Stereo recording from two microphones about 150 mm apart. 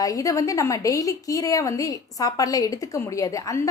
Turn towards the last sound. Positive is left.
turn(degrees=20)  # may be behind; listen again after turning